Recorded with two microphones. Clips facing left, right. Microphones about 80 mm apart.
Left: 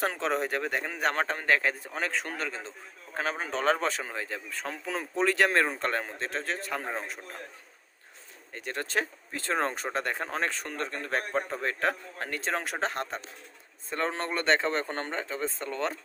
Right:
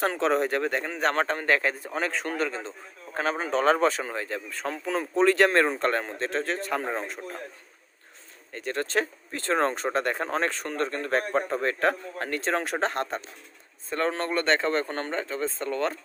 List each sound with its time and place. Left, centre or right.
0.0 s speech: centre
8.5 s speech: centre
13.9 s speech: centre